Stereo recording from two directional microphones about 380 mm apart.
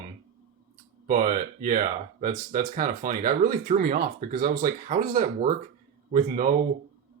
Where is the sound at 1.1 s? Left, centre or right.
Right.